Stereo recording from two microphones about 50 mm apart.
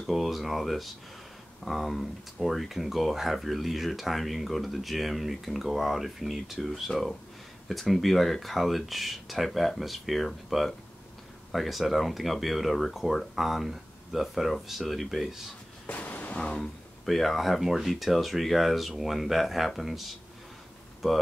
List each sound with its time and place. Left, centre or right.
0.0 s speech: centre
15.9 s music: left
16.3 s speech: centre
17.0 s speech: centre